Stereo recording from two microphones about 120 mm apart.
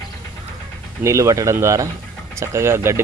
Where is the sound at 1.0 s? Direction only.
25° right (ahead or behind).